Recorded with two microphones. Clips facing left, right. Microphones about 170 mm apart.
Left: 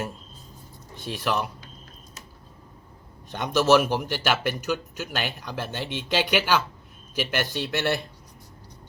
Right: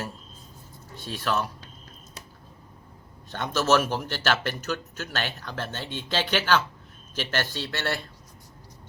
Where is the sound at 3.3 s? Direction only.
15° left (ahead or behind).